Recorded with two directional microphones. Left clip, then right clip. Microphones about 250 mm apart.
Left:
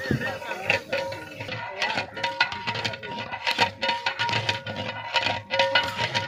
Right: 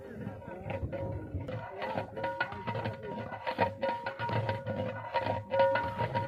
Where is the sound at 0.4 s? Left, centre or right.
Left.